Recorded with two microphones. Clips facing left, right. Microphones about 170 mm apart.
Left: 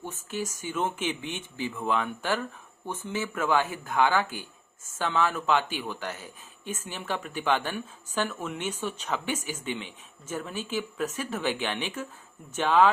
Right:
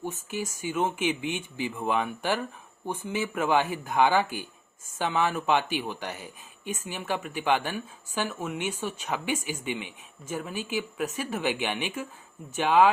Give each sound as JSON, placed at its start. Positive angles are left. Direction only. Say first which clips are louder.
{"t": 0.0, "sound": "speech", "louder": "right 1 dB", "side_deg": -10}